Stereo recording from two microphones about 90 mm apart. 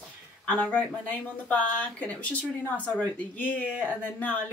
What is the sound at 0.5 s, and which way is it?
Speech, 15° left (ahead or behind).